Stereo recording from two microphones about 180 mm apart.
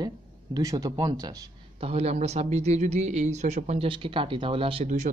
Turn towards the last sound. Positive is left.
turn(degrees=-30)  # may be behind; listen again after turning